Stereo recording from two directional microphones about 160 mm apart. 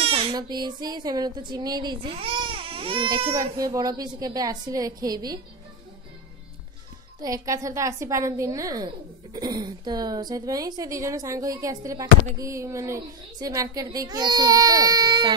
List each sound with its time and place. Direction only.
0.0 s speech: 35° right (ahead or behind)
3.3 s a woman's voice: 20° right (ahead or behind)
7.2 s a woman's voice: 20° right (ahead or behind)